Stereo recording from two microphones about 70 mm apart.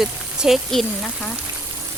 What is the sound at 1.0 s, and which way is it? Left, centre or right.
Speech, centre.